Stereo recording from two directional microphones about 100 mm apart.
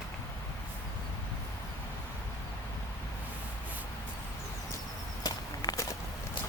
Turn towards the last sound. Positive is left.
turn(degrees=35)  # may be behind; listen again after turning